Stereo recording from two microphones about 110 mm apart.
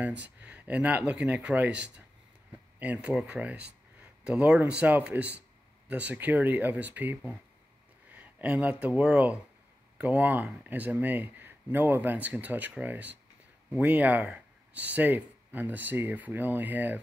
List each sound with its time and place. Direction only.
0.0 s speech: 15° right (ahead or behind)